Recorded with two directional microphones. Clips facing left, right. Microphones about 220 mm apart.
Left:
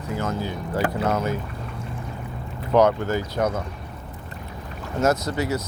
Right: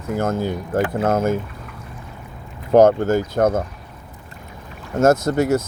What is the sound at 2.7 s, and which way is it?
Speech, 45° right (ahead or behind).